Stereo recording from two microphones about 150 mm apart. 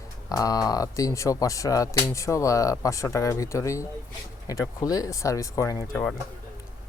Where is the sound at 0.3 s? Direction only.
25° left (ahead or behind).